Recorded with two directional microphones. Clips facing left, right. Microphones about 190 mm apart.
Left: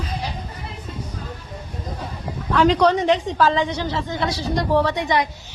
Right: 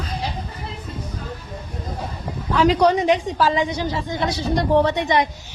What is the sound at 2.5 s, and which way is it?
A woman's voice, 5° right (ahead or behind).